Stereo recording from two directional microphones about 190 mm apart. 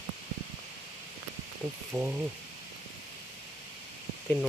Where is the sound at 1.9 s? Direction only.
5° right (ahead or behind).